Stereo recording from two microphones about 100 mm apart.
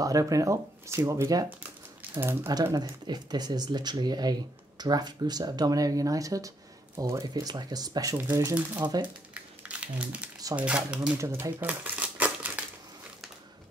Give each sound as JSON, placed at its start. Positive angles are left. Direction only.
{"t": 0.0, "sound": "speech", "side_deg": -35}
{"t": 2.7, "sound": "speech", "side_deg": -40}
{"t": 9.0, "sound": "crumpling", "side_deg": -15}
{"t": 10.5, "sound": "speech", "side_deg": -10}
{"t": 11.1, "sound": "speech", "side_deg": -30}
{"t": 11.6, "sound": "crumpling", "side_deg": -15}